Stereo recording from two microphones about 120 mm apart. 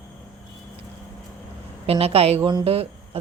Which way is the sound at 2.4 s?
40° right (ahead or behind).